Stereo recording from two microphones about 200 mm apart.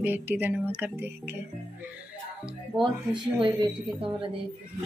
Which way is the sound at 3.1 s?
20° right (ahead or behind).